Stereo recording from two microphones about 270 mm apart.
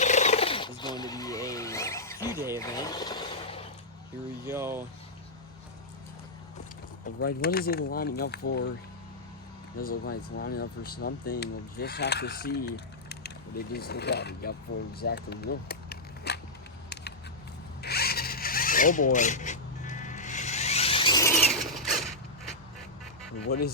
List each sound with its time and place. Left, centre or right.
0.0 s a sound: left
2.6 s speech: centre
4.4 s speech: centre
7.2 s speech: left
9.7 s speech: left
14.7 s speech: left
15.0 s cap gun: left
17.8 s zipper: left; by 21.3 s centre
21.3 s mechanisms: centre